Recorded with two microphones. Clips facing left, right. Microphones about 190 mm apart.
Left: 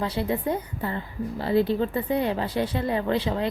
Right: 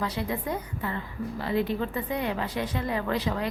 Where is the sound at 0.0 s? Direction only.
30° left (ahead or behind).